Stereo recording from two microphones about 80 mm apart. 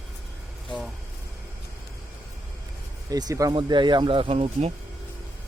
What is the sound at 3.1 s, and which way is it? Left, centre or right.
Speech, right.